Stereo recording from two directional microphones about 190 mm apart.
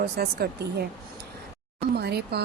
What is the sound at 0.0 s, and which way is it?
Speech, 55° right (ahead or behind).